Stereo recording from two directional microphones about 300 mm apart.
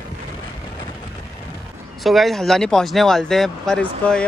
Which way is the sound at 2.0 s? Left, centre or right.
Centre.